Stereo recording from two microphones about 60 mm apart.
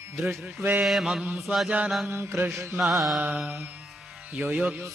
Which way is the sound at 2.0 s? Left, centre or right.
Right.